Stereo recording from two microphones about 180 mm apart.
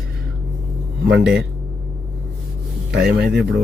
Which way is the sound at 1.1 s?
5° right (ahead or behind).